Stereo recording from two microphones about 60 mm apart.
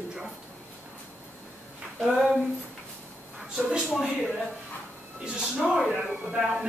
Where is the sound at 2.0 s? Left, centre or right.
Centre.